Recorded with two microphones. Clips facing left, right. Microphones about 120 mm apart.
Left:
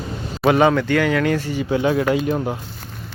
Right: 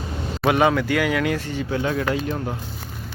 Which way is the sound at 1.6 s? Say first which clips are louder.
Left 6 dB; 20° left (ahead or behind).